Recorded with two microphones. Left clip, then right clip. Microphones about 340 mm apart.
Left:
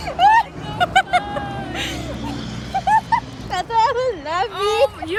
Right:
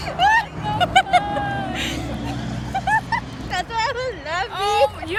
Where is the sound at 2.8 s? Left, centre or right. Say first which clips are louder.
Left 4 dB; centre.